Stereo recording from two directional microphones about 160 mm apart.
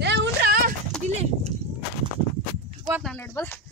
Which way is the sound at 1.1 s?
40° right (ahead or behind).